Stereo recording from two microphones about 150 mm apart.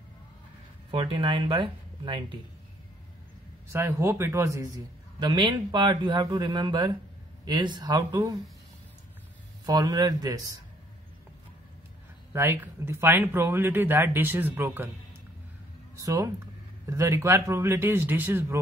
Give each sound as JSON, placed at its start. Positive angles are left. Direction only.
{"t": 0.9, "sound": "speech", "side_deg": -35}
{"t": 3.7, "sound": "a man's voice", "side_deg": -15}
{"t": 9.7, "sound": "a man's voice", "side_deg": -25}
{"t": 12.3, "sound": "speech", "side_deg": -15}
{"t": 16.0, "sound": "a man's voice", "side_deg": -20}